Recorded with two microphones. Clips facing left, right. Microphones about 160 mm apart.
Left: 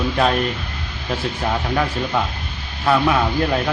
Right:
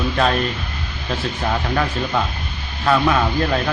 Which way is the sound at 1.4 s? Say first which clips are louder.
Even; 5° left (ahead or behind).